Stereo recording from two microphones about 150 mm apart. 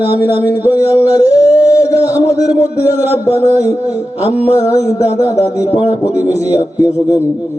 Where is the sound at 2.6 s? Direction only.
15° right (ahead or behind).